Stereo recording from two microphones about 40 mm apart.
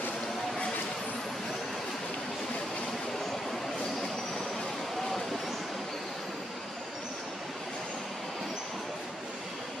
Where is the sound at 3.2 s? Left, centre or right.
Centre.